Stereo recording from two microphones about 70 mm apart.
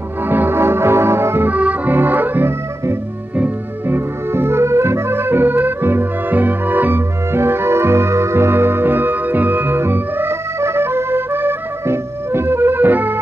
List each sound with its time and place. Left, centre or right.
0.3 s music: right
1.5 s accordion: right
3.3 s music: right